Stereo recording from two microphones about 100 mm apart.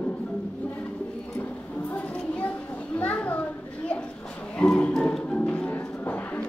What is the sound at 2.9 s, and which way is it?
Children playing, 15° left (ahead or behind).